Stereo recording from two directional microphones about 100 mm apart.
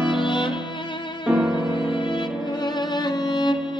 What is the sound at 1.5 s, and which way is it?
Music, 50° left (ahead or behind).